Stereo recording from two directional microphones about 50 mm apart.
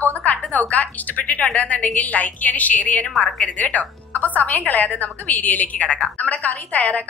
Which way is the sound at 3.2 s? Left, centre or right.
Left.